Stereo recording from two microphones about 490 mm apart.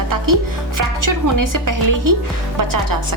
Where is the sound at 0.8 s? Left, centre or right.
Right.